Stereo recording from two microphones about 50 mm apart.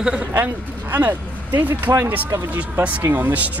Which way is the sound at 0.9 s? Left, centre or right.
Right.